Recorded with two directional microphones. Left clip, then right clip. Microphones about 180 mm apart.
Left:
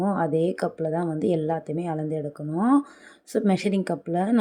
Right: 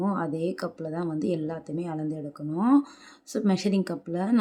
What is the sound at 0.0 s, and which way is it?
A woman's voice, 15° left (ahead or behind).